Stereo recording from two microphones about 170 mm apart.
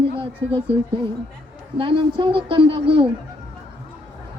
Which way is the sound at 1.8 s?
30° right (ahead or behind).